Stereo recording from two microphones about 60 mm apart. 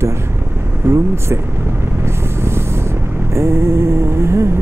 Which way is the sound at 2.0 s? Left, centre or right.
Right.